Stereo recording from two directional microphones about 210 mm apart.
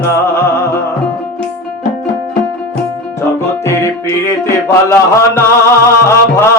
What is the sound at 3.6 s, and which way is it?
Music, 15° left (ahead or behind).